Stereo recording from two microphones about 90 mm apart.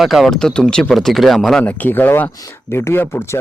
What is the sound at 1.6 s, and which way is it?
Speech, 20° left (ahead or behind).